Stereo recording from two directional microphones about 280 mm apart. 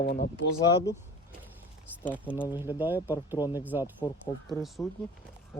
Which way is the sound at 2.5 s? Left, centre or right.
Centre.